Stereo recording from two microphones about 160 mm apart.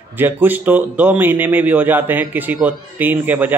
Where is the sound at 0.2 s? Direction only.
10° right (ahead or behind).